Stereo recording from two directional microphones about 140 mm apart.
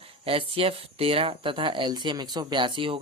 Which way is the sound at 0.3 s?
40° right (ahead or behind).